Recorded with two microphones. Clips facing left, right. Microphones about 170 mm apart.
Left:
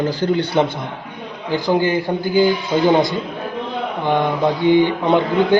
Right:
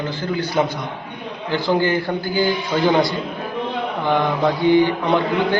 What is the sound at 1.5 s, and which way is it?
A man's voice, 15° left (ahead or behind).